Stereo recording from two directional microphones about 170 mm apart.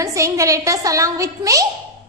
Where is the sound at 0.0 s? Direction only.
20° right (ahead or behind).